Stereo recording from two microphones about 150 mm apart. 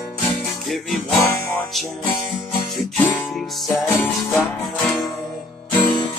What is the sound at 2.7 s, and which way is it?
Music, centre (ahead or behind).